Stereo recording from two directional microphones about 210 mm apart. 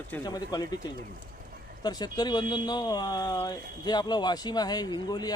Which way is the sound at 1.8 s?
20° left (ahead or behind).